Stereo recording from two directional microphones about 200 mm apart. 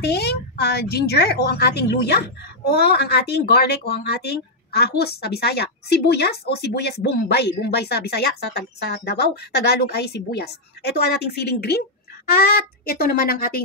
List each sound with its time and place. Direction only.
0.0 s a woman's voice: 55° left (ahead or behind)